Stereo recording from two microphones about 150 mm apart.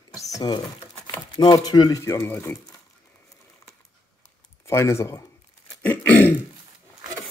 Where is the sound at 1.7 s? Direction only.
25° left (ahead or behind); by 2.8 s 10° left (ahead or behind).